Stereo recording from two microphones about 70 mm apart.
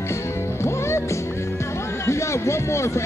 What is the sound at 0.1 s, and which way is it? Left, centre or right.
Music, left.